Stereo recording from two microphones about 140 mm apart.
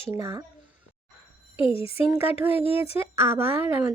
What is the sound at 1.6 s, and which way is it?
Speech, 40° left (ahead or behind).